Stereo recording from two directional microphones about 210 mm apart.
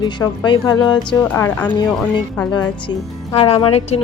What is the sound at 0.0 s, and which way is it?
A woman's voice, 20° left (ahead or behind).